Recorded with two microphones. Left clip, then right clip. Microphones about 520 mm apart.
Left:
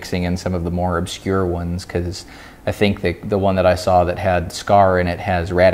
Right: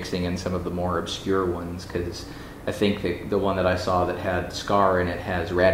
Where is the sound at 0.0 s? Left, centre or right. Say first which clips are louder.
Left 5 dB; left.